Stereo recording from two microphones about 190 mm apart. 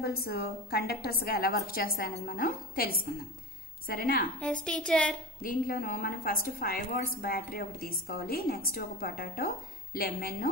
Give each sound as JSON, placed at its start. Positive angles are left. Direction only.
{"t": 0.0, "sound": "a woman's voice", "side_deg": 55}
{"t": 4.6, "sound": "speech", "side_deg": 5}
{"t": 5.4, "sound": "a woman's voice", "side_deg": 50}